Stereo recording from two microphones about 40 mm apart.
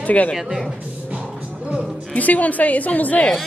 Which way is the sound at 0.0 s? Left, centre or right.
Left.